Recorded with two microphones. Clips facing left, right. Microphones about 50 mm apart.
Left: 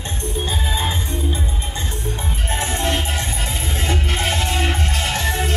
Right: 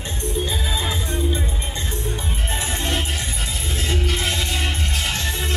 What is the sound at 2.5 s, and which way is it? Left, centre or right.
Music, left.